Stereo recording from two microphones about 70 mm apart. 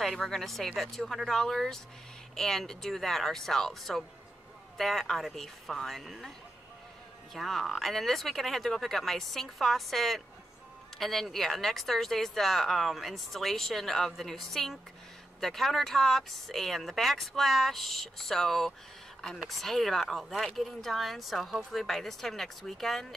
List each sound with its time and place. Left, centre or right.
0.0 s speech: centre
7.3 s speech: centre